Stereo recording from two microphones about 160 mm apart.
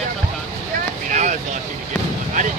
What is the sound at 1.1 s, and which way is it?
Vehicle, 50° right (ahead or behind).